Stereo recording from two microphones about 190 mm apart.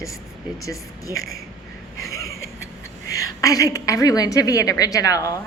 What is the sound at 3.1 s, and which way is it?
A woman's voice, 20° left (ahead or behind).